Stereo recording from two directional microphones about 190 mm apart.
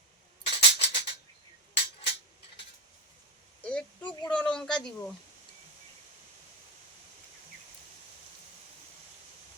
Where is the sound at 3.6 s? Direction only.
5° left (ahead or behind).